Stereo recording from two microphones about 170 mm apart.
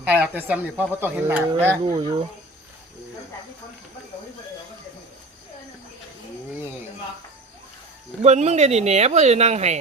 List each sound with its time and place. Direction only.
0.0 s speech: 10° right (ahead or behind)
1.8 s speech: 30° right (ahead or behind)
8.2 s speech: 40° right (ahead or behind)